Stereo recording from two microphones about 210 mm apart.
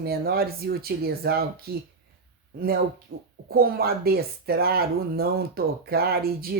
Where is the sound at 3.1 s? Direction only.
50° right (ahead or behind).